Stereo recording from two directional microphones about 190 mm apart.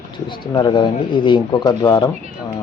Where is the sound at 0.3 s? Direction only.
25° left (ahead or behind).